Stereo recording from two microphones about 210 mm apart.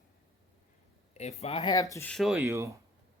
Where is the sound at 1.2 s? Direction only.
30° left (ahead or behind); by 2.5 s centre (ahead or behind).